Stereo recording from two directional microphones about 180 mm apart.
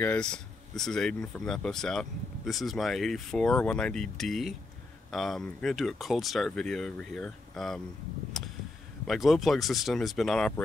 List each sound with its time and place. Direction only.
0.0 s speech: 5° left (ahead or behind)
8.3 s a sound: centre (ahead or behind)
9.0 s speech: centre (ahead or behind)